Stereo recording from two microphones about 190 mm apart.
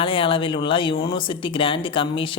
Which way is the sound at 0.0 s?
30° left (ahead or behind).